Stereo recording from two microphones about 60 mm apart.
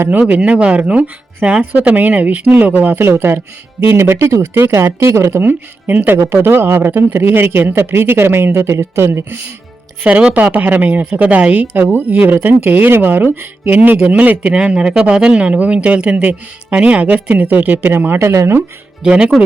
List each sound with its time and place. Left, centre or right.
0.0 s speech: right
4.5 s speech: right
5.4 s speech: right
10.0 s speech: right
18.2 s speech: right
19.0 s speech: centre